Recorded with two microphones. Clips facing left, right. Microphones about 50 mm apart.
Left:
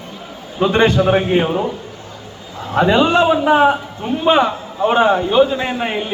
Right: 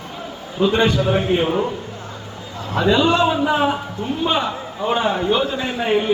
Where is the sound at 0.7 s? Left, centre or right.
Left.